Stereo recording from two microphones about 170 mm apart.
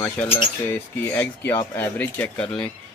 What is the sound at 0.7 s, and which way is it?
Speech, 10° left (ahead or behind).